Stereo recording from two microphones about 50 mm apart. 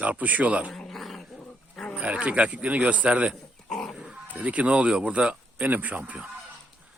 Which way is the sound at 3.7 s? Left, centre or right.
Centre.